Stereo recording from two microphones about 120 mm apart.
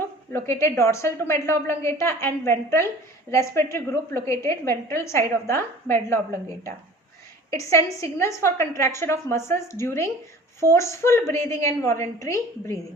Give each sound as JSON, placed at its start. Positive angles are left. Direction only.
{"t": 0.0, "sound": "a woman's voice", "side_deg": 20}
{"t": 7.5, "sound": "a woman's voice", "side_deg": 25}